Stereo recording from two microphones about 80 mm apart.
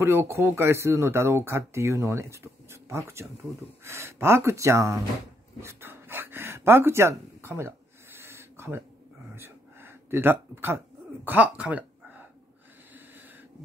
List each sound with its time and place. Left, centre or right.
0.0 s speech: right
5.6 s a sound: right
11.2 s speech: centre